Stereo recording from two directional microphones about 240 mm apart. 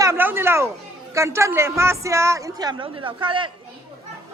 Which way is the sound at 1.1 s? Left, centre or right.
Centre.